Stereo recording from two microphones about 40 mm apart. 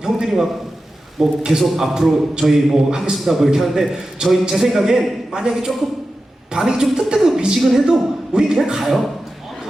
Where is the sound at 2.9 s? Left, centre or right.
Centre.